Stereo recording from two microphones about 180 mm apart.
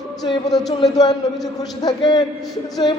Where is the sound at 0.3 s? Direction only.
25° left (ahead or behind).